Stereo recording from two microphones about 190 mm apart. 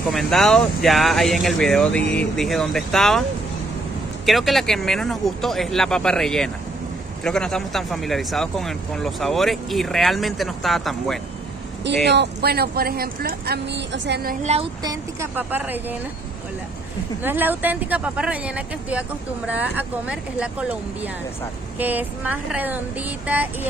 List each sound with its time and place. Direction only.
0.1 s speech: centre (ahead or behind)
4.3 s speech: centre (ahead or behind)
11.8 s speech: 65° right (ahead or behind)
14.4 s speech: 35° right (ahead or behind)
14.8 s speech: 15° right (ahead or behind)
17.2 s speech: 10° right (ahead or behind)
21.7 s speech: 10° right (ahead or behind)